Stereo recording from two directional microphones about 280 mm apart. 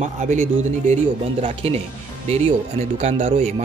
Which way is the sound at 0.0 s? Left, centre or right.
Right.